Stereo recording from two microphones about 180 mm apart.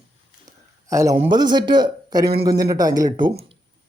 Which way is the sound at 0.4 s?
20° right (ahead or behind).